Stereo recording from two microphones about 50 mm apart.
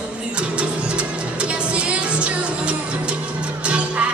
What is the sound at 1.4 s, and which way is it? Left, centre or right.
Music, right.